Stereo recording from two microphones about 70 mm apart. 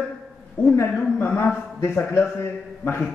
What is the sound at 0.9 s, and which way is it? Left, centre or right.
Speech, left.